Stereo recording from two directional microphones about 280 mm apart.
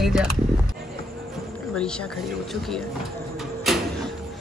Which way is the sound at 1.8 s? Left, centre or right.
Centre.